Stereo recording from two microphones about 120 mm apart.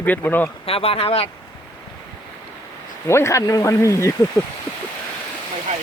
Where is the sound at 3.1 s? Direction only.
25° left (ahead or behind).